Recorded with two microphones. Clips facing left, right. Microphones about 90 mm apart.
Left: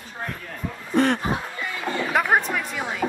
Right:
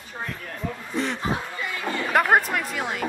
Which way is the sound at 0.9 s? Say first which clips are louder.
Left 8 dB; 55° left (ahead or behind).